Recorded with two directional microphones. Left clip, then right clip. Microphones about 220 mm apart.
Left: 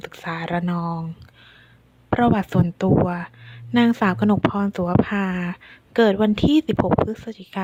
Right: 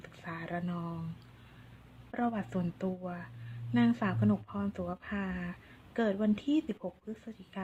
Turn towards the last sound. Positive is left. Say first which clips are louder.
# left 15 dB
turn(degrees=40)  # may be behind; listen again after turning